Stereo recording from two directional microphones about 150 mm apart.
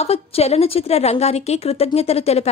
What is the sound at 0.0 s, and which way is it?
A woman's voice, 45° left (ahead or behind).